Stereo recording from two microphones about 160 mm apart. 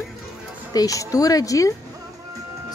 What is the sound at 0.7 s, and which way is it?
Speech, 20° left (ahead or behind).